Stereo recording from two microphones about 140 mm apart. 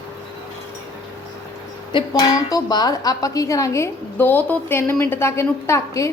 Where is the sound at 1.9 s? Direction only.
30° left (ahead or behind).